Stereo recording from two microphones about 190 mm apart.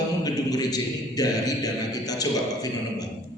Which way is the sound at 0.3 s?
20° left (ahead or behind).